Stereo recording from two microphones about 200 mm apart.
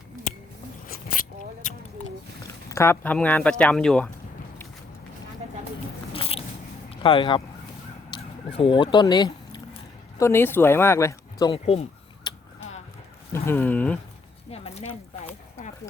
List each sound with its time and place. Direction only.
0.9 s a sound: 45° left (ahead or behind)
2.6 s speech: 15° left (ahead or behind)
6.1 s biting: 30° left (ahead or behind)
6.9 s speech: 25° left (ahead or behind)
13.3 s speech: 10° left (ahead or behind)
14.5 s a sound: 30° left (ahead or behind)